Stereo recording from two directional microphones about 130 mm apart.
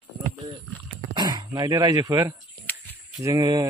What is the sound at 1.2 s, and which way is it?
Speech, 30° right (ahead or behind).